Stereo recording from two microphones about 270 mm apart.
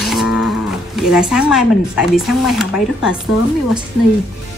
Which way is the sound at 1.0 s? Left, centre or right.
Centre.